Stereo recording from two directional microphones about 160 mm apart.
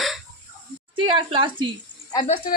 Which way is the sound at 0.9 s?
30° right (ahead or behind).